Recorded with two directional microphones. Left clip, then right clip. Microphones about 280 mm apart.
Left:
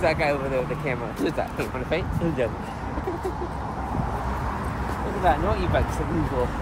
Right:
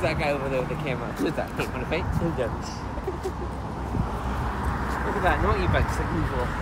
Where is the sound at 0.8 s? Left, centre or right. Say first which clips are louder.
Left 1 dB; centre.